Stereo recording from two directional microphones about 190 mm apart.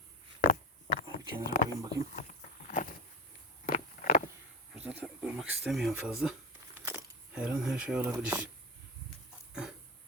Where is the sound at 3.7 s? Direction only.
40° left (ahead or behind).